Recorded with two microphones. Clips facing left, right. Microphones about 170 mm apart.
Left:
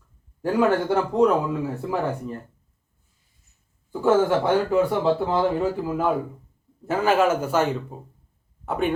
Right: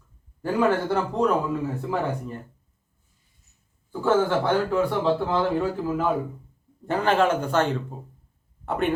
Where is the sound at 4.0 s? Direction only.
10° left (ahead or behind).